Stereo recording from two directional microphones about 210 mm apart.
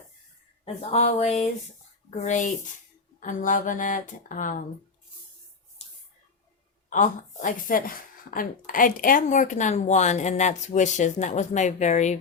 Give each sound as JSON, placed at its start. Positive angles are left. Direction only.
{"t": 0.6, "sound": "speech", "side_deg": 30}
{"t": 5.8, "sound": "a sound", "side_deg": 30}
{"t": 6.9, "sound": "speech", "side_deg": 35}